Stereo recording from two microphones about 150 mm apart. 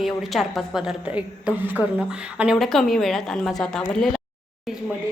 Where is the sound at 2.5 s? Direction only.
Centre (ahead or behind).